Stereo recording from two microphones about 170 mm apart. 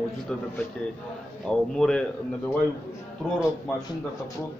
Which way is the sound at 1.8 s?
5° left (ahead or behind).